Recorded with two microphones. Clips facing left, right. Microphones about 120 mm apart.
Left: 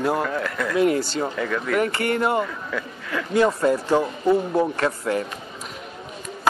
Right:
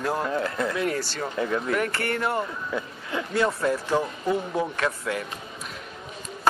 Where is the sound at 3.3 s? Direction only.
15° left (ahead or behind).